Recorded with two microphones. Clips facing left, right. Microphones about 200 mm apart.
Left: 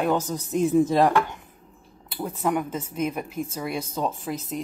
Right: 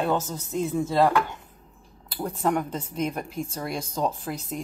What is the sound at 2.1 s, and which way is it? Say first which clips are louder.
Speech: even; centre (ahead or behind).